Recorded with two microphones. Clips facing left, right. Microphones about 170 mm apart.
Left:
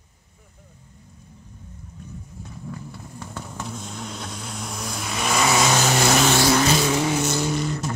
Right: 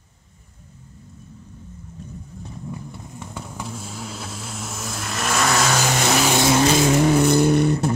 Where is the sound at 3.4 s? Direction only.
5° right (ahead or behind).